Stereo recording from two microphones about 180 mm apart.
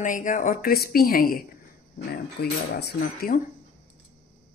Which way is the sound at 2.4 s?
65° left (ahead or behind).